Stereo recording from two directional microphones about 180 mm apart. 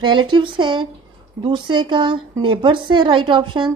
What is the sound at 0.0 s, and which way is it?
Speech, 25° right (ahead or behind).